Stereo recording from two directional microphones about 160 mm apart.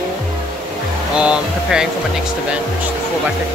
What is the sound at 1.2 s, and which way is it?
Speech, 5° right (ahead or behind).